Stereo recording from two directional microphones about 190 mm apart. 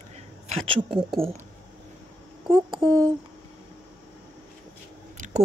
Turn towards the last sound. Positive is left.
turn(degrees=-40)  # may be behind; listen again after turning